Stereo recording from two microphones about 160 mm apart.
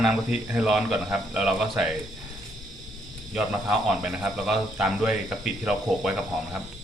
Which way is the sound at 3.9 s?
Centre (ahead or behind).